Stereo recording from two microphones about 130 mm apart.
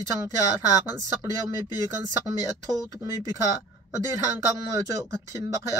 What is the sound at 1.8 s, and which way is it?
Speech, 25° right (ahead or behind).